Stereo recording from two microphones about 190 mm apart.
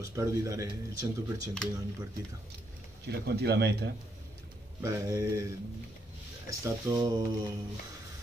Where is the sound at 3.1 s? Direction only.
60° right (ahead or behind).